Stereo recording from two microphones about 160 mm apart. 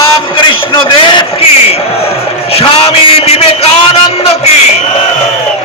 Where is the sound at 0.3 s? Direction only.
30° left (ahead or behind).